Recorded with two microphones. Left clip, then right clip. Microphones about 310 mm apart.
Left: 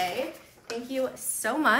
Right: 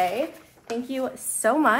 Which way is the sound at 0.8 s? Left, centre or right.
Centre.